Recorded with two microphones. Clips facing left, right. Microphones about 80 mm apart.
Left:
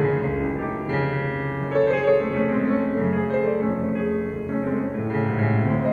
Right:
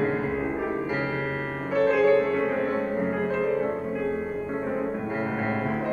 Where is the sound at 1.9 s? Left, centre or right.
Centre.